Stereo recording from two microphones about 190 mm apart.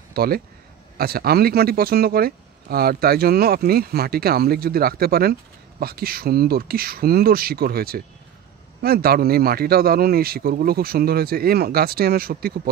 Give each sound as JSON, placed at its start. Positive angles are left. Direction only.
{"t": 0.1, "sound": "speech", "side_deg": -55}